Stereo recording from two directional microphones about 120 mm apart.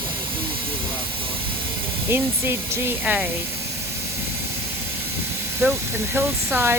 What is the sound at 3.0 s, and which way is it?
Speech, 10° right (ahead or behind).